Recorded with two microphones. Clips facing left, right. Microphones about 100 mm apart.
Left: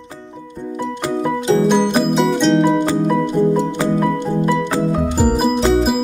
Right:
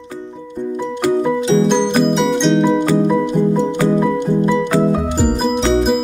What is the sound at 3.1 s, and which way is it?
Music, 15° right (ahead or behind).